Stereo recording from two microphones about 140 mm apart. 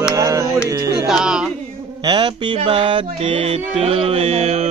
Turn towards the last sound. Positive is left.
turn(degrees=-45)  # may be behind; listen again after turning